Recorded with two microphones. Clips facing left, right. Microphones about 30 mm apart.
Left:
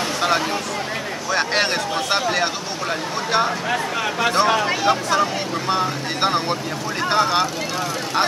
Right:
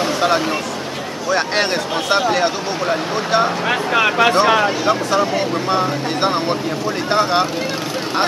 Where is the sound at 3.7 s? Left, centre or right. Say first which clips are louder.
Right 6 dB; right.